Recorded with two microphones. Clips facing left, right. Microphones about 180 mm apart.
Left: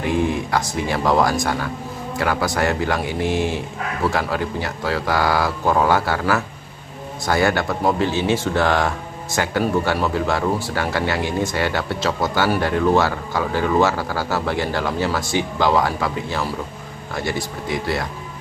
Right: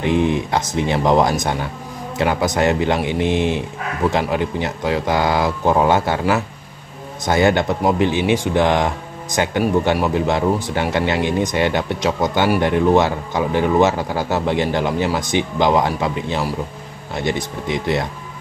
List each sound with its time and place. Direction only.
0.0 s speech: 20° right (ahead or behind)